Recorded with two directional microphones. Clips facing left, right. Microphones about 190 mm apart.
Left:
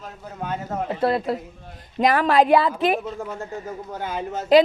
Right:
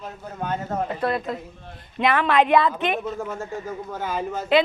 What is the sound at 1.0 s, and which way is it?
A woman's voice, 30° left (ahead or behind).